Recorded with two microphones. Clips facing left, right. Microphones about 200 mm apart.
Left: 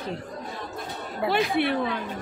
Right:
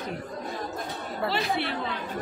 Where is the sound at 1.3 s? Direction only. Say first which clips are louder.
Left 7 dB; 55° left (ahead or behind).